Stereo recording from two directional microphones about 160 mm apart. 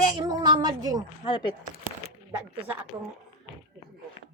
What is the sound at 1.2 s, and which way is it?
Speech, 30° left (ahead or behind).